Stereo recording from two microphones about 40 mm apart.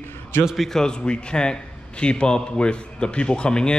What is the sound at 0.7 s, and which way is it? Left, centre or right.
Speech, centre.